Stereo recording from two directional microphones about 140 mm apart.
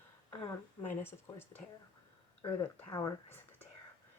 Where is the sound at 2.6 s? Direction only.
25° left (ahead or behind).